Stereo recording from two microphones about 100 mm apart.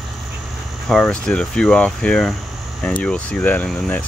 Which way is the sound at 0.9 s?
10° left (ahead or behind).